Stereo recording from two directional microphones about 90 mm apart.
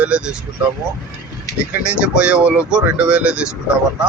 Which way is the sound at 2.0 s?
10° right (ahead or behind).